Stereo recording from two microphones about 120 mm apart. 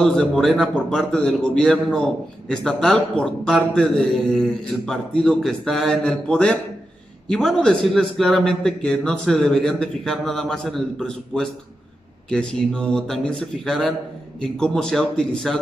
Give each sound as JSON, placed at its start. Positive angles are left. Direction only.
{"t": 0.0, "sound": "a man's voice", "side_deg": 5}